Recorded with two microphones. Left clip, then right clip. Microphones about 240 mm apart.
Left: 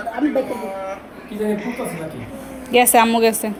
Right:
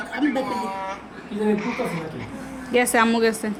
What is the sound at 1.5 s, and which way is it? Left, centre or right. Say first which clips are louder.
A woman's voice: even; centre.